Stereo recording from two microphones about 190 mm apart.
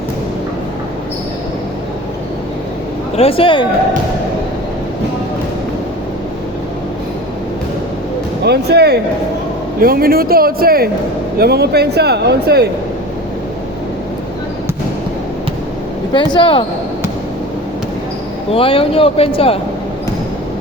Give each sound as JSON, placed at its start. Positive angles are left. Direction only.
{"t": 3.2, "sound": "speech", "side_deg": 30}
{"t": 8.4, "sound": "speech", "side_deg": -60}
{"t": 16.1, "sound": "speech", "side_deg": 25}
{"t": 18.5, "sound": "speech", "side_deg": 30}